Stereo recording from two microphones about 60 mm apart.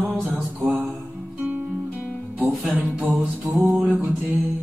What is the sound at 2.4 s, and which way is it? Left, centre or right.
Music, centre.